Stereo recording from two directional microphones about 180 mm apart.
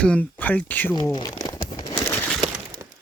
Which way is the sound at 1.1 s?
25° left (ahead or behind).